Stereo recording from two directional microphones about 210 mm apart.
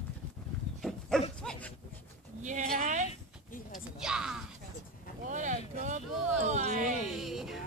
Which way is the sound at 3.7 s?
5° right (ahead or behind).